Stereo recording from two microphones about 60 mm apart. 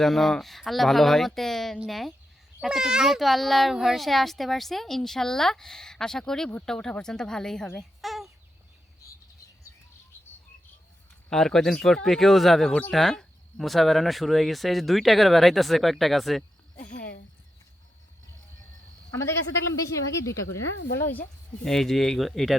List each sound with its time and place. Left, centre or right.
0.0 s a child's voice: centre
2.6 s a child's voice: centre
7.8 s a sound: centre
11.3 s a child's voice: centre
19.7 s speech: left
21.0 s speech: left
21.6 s a child's voice: centre